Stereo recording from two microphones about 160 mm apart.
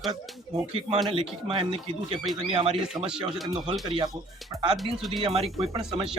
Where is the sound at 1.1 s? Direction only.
35° right (ahead or behind).